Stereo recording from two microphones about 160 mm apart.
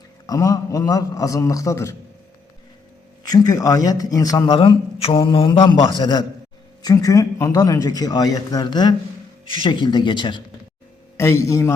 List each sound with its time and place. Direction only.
0.3 s speech: 20° left (ahead or behind)
3.2 s speech: 25° left (ahead or behind)
11.2 s a man's voice: 15° left (ahead or behind)